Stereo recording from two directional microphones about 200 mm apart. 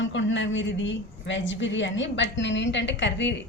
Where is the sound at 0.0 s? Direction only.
70° left (ahead or behind).